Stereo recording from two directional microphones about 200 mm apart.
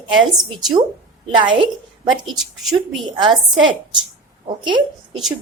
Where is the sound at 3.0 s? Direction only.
25° right (ahead or behind).